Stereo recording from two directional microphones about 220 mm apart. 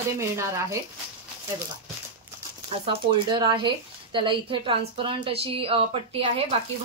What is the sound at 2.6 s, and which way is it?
A woman's voice, 20° right (ahead or behind).